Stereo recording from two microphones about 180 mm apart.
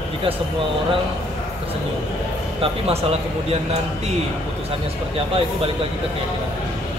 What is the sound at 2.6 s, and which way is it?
Speech, 35° right (ahead or behind).